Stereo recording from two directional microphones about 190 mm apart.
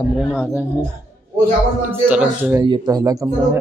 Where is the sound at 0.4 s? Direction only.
10° right (ahead or behind).